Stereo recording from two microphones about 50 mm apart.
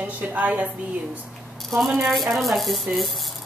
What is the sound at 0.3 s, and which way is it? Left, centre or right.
Speech, right.